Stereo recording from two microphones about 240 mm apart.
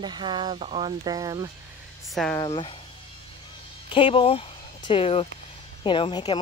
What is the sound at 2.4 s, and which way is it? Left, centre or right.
Speech, left.